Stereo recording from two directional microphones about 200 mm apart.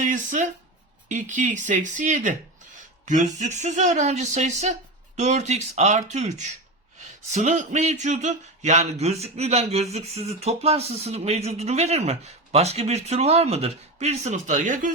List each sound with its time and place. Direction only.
0.0 s speech: 40° right (ahead or behind)